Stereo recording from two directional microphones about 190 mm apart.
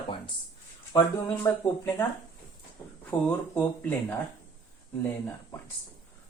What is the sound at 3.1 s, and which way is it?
Speech, 5° left (ahead or behind).